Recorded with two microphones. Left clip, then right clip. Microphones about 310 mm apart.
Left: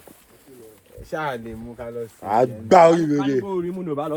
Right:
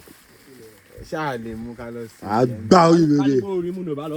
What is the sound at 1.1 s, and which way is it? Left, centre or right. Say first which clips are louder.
Speech: right 1 dB; right.